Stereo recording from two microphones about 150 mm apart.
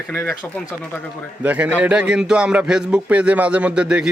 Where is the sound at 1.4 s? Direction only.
10° right (ahead or behind).